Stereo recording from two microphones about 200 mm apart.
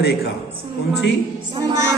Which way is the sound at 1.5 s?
15° right (ahead or behind).